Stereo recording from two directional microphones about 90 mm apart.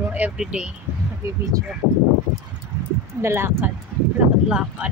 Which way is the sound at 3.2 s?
30° right (ahead or behind).